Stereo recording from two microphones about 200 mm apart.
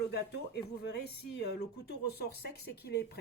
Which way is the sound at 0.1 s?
55° left (ahead or behind).